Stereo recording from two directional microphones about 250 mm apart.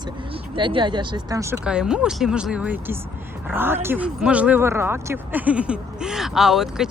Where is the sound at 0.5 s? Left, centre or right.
Centre.